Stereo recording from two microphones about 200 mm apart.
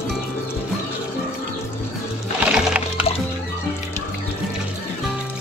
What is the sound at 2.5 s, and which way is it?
Music, 5° right (ahead or behind).